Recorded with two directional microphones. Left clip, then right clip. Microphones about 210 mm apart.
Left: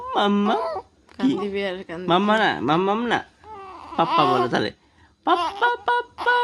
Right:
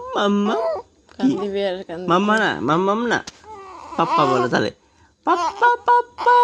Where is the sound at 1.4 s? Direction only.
30° left (ahead or behind).